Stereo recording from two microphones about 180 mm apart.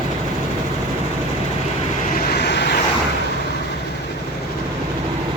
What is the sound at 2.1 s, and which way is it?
Vehicle, 60° left (ahead or behind).